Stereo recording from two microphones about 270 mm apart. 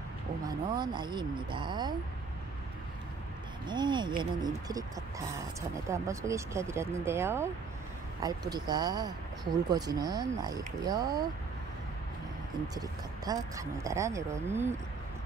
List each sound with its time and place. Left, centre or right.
0.5 s speech: centre
3.6 s speech: centre
5.9 s speech: centre
12.7 s speech: centre